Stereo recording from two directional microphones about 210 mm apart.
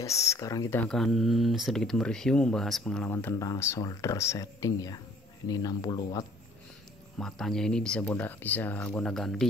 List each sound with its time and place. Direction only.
0.0 s speech: 15° left (ahead or behind)
7.2 s speech: centre (ahead or behind)